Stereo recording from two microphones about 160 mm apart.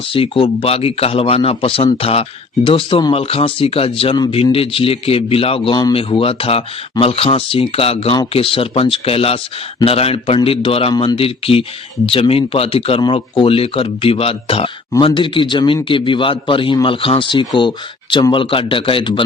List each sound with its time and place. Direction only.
0.1 s a man's voice: 35° left (ahead or behind)